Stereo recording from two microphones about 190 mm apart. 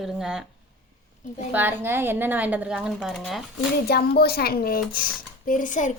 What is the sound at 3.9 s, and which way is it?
A woman's voice, 55° left (ahead or behind).